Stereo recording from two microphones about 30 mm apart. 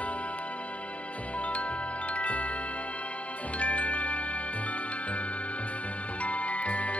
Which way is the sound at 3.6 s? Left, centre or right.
Left.